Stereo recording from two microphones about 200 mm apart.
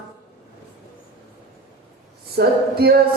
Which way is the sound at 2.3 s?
50° right (ahead or behind).